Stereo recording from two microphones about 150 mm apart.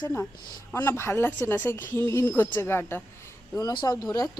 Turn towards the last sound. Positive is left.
turn(degrees=25)  # may be behind; listen again after turning